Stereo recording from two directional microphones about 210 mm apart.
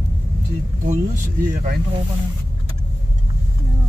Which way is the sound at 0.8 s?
35° right (ahead or behind).